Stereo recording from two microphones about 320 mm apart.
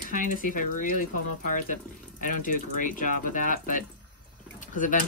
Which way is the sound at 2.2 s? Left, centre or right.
Left.